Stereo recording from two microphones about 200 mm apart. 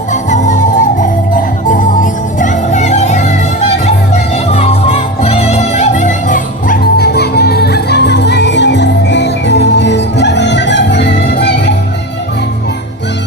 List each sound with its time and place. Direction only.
0.1 s music: 40° left (ahead or behind); by 11.7 s 55° left (ahead or behind)